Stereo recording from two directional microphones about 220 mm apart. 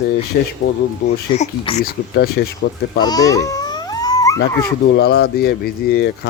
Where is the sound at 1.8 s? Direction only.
45° left (ahead or behind).